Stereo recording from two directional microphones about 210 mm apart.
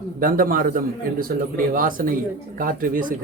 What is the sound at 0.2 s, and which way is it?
Speech, 40° right (ahead or behind).